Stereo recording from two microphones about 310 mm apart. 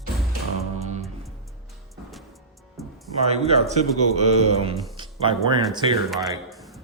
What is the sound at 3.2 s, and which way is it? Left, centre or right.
Speech, centre.